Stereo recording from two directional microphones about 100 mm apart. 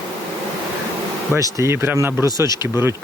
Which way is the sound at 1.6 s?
25° right (ahead or behind).